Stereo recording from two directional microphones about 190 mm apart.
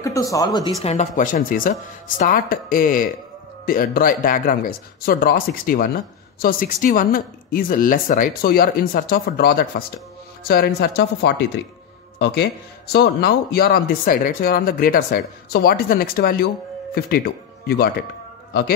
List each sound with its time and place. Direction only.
0.0 s speech: 15° left (ahead or behind)
0.8 s a man's voice: 40° left (ahead or behind)
17.6 s a man's voice: 55° left (ahead or behind)